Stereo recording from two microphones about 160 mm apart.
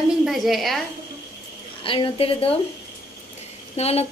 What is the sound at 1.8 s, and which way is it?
Speech, 30° left (ahead or behind).